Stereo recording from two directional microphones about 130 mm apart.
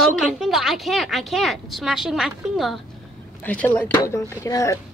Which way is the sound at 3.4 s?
10° left (ahead or behind).